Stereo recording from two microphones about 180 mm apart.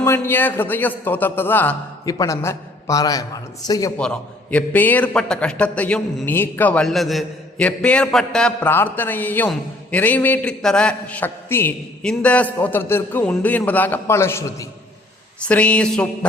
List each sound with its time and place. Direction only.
0.0 s a man's voice: 15° left (ahead or behind)
3.9 s a man's voice: 5° left (ahead or behind)